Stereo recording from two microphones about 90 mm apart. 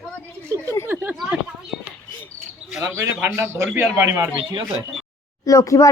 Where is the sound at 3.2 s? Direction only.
25° right (ahead or behind).